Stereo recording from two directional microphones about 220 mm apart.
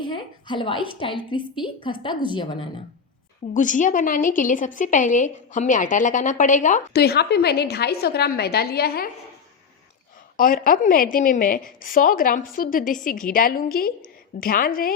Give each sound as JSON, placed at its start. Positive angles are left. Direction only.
{"t": 0.0, "sound": "a woman's voice", "side_deg": 20}
{"t": 3.5, "sound": "a woman's voice", "side_deg": 35}
{"t": 10.3, "sound": "a woman's voice", "side_deg": 40}